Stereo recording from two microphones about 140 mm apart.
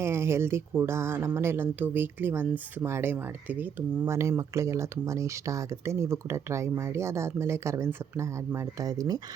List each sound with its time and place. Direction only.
0.0 s speech: 20° right (ahead or behind)